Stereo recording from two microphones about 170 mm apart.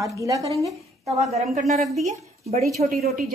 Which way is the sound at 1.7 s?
40° right (ahead or behind).